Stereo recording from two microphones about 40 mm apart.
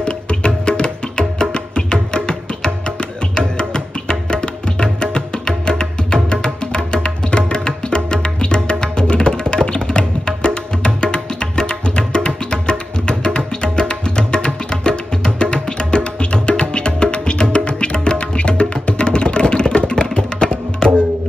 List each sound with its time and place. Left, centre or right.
0.0 s music: left
19.9 s tabla: left